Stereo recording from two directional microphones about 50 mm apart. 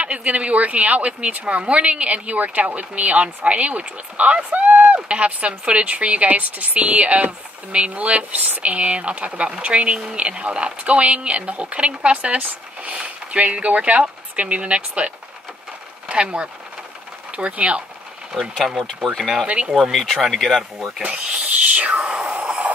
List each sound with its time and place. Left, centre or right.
0.0 s a woman's voice: right
18.4 s speech: centre
19.4 s a woman's voice: right
19.7 s speech: centre
21.0 s a woman's voice: right
21.7 s a sound: right